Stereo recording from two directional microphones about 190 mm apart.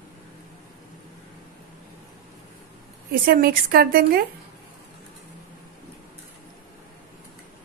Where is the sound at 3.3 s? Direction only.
50° right (ahead or behind).